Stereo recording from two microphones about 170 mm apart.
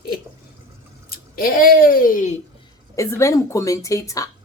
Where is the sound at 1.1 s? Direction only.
60° left (ahead or behind).